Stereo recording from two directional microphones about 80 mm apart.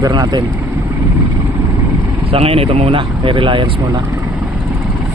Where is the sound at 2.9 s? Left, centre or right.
Right.